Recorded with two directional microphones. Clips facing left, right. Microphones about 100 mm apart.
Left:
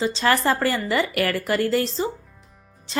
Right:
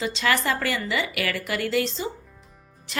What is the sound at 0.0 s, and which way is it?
A woman's voice, 35° left (ahead or behind).